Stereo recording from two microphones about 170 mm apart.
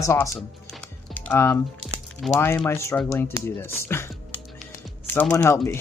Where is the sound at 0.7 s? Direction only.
10° left (ahead or behind).